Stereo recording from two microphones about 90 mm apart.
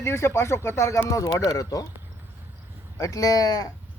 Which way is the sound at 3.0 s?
40° left (ahead or behind).